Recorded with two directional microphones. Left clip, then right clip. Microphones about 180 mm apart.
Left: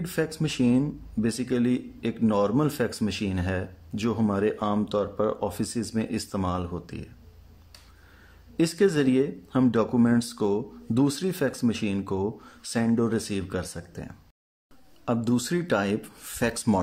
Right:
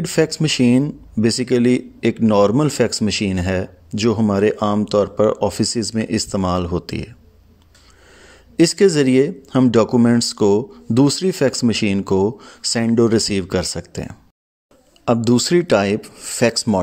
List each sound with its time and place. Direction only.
0.0 s speech: 30° right (ahead or behind)
8.2 s speech: 30° right (ahead or behind)